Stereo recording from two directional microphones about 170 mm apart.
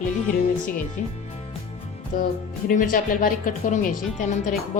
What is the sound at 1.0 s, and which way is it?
Speech, 50° left (ahead or behind).